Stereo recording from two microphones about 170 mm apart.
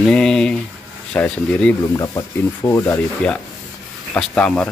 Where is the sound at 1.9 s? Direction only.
20° left (ahead or behind).